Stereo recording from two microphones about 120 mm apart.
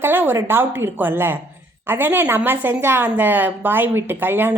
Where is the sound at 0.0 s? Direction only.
20° right (ahead or behind).